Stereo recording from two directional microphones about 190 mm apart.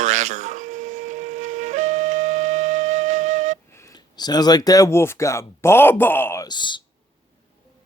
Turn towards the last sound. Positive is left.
turn(degrees=25)  # may be behind; listen again after turning